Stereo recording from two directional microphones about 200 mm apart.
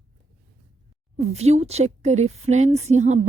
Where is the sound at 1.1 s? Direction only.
35° right (ahead or behind).